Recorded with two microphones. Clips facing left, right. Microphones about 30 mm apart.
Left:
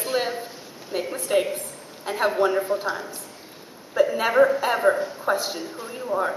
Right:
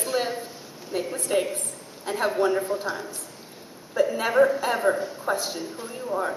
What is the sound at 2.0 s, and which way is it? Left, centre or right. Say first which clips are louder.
Speech: left 2 dB; centre.